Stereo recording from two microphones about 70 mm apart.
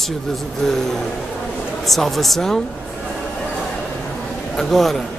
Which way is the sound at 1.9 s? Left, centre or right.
Centre.